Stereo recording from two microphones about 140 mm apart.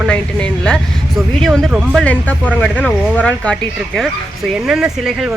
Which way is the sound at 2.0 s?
10° left (ahead or behind).